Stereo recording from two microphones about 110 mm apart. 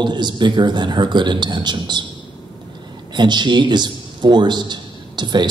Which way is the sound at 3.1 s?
45° right (ahead or behind).